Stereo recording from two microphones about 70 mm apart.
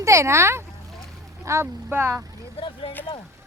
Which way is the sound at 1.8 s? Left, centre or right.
Right.